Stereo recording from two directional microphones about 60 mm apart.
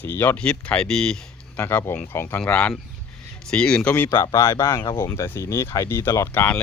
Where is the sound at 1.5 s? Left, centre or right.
Left.